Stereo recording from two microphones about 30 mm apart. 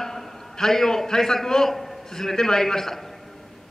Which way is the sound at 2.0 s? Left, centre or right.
Centre.